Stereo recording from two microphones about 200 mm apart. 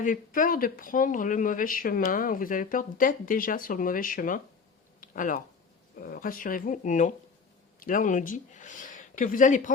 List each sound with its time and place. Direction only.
0.0 s speech: 40° left (ahead or behind)
4.9 s a sound: 45° left (ahead or behind)
6.0 s speech: 45° left (ahead or behind)